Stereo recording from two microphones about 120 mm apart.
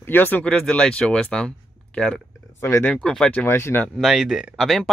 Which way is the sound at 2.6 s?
20° left (ahead or behind).